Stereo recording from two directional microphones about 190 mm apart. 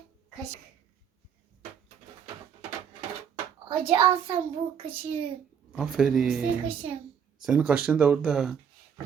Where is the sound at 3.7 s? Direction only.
25° right (ahead or behind).